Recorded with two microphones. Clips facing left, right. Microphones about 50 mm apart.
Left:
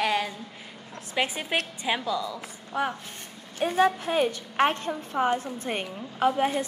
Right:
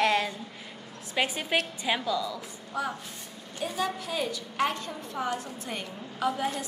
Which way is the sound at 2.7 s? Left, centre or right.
Left.